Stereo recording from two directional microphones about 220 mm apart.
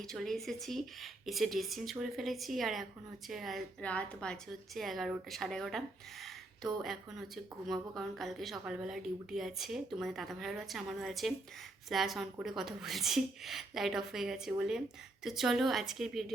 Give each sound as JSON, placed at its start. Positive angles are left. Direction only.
{"t": 0.0, "sound": "a woman's voice", "side_deg": 0}